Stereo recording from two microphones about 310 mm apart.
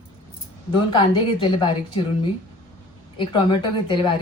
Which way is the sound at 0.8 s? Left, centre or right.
Centre.